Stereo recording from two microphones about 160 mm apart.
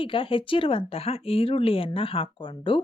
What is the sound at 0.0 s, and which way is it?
Speech, 35° left (ahead or behind).